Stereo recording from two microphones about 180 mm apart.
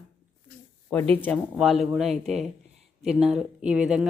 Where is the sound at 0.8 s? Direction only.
5° left (ahead or behind).